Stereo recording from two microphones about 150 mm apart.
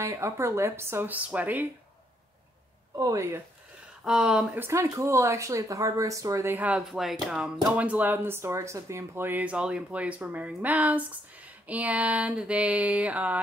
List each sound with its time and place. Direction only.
0.0 s speech: 20° right (ahead or behind)
3.0 s speech: 20° right (ahead or behind)
4.0 s speech: 5° right (ahead or behind)
4.6 s speech: 20° right (ahead or behind)